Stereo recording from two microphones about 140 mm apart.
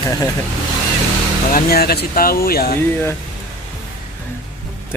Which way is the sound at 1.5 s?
90° left.